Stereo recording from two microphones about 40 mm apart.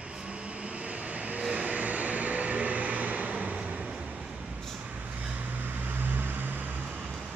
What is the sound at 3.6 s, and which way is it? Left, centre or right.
Train, right.